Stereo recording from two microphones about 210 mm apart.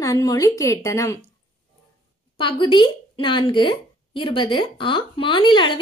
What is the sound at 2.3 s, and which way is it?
Speech, 25° left (ahead or behind).